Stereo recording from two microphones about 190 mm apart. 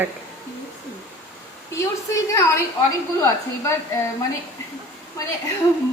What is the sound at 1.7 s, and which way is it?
A woman's voice, 15° left (ahead or behind).